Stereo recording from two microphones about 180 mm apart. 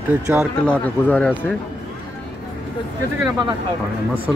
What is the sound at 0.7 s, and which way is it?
Speech, 10° left (ahead or behind).